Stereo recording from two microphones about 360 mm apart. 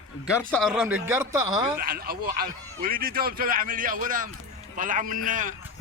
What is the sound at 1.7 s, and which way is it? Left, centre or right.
A man's voice, right.